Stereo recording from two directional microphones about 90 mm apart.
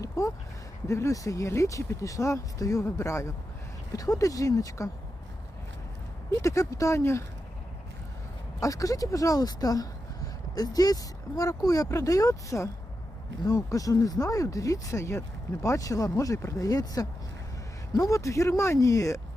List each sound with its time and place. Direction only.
0.0 s a sound: 35° left (ahead or behind)
0.9 s speech: 35° left (ahead or behind)
6.4 s speech: 35° left (ahead or behind)
8.6 s speech: 40° left (ahead or behind)